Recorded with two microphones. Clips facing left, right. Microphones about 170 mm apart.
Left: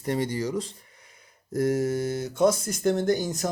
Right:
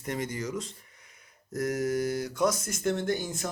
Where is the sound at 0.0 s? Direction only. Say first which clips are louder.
Left 6 dB; 35° left (ahead or behind).